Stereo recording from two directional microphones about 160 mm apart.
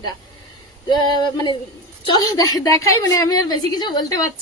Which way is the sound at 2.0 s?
25° left (ahead or behind).